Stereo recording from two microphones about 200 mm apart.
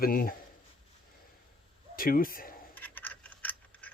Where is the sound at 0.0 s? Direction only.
45° left (ahead or behind).